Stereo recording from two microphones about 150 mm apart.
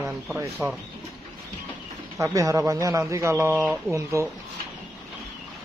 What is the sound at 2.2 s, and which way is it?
Speech, 20° right (ahead or behind).